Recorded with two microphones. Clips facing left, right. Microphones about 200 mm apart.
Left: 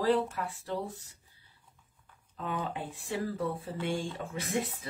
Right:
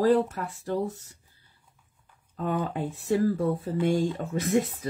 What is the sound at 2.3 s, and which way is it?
Speech, 45° right (ahead or behind).